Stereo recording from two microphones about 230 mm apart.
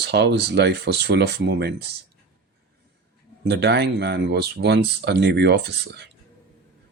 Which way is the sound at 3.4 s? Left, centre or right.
Right.